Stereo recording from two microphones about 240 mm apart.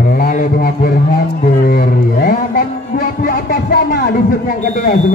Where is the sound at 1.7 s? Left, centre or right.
Left.